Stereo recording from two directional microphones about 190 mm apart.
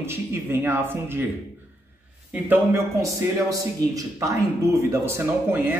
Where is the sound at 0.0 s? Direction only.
10° right (ahead or behind).